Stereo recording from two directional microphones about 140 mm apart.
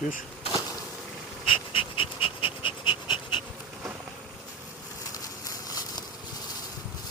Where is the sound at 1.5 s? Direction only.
40° left (ahead or behind).